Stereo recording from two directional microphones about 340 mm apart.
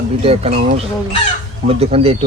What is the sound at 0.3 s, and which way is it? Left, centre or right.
Chicken, centre.